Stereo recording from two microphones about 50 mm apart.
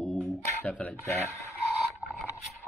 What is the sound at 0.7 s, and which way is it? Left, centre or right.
Speech, left.